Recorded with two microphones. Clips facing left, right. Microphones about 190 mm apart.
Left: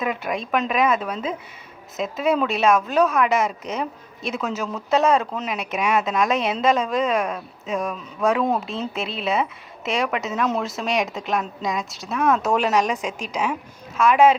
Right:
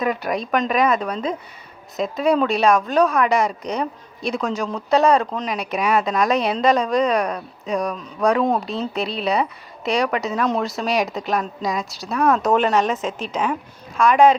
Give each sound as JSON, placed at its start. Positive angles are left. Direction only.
{"t": 0.0, "sound": "a woman's voice", "side_deg": 0}
{"t": 13.1, "sound": "a woman's voice", "side_deg": 10}